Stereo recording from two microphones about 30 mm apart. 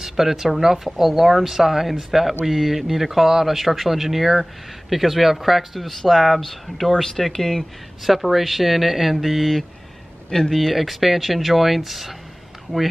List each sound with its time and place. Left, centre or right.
0.2 s speech: centre
6.9 s speech: centre
8.0 s speech: centre
10.8 s speech: centre